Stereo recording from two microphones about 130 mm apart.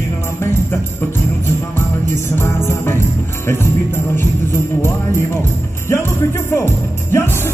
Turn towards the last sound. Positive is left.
turn(degrees=20)  # may be behind; listen again after turning